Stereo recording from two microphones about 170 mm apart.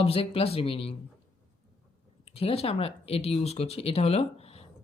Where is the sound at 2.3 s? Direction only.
35° left (ahead or behind).